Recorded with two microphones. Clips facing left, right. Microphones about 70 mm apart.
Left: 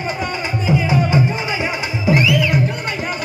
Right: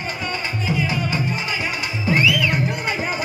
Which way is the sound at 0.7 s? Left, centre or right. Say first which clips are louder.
Left 7 dB; left.